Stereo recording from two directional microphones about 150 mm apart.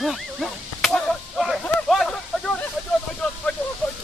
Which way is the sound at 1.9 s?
Centre (ahead or behind).